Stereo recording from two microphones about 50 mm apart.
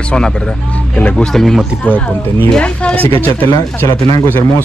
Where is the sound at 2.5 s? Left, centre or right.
Left.